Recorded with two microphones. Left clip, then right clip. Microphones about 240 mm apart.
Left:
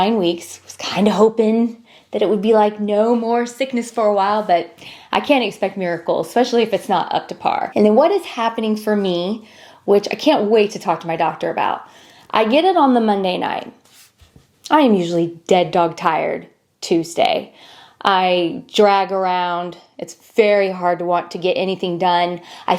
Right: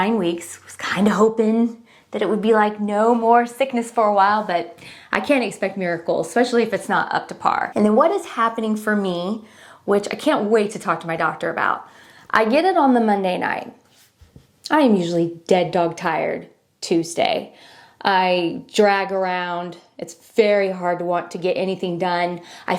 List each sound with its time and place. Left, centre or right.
0.9 s a woman's voice: right
3.8 s a woman's voice: right
5.5 s a woman's voice: right
14.7 s a woman's voice: right
18.1 s speech: centre
18.8 s a woman's voice: right